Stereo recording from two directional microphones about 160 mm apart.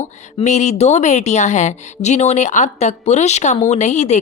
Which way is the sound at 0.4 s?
45° left (ahead or behind).